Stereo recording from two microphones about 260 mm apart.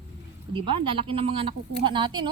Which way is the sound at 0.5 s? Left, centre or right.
Centre.